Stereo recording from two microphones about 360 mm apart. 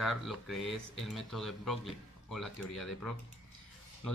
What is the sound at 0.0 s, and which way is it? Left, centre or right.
Speech, centre.